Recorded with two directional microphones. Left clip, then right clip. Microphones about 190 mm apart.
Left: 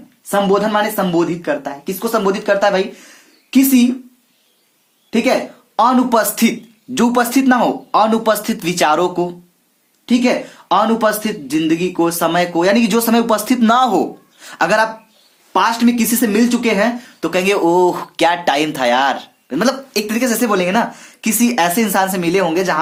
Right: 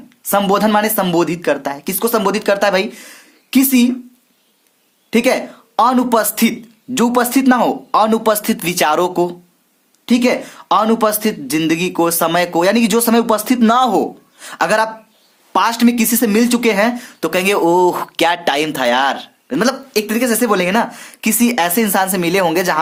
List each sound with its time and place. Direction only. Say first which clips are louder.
0.3 s speech: right 1 dB; 50° right (ahead or behind)
5.1 s speech: right 1 dB; 40° right (ahead or behind)
15.5 s speech: even; 40° right (ahead or behind)